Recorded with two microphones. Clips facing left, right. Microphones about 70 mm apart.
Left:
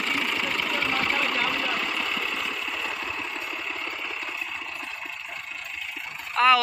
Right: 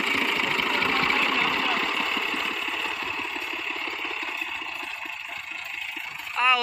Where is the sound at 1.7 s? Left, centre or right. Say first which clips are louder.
Right 2 dB; centre.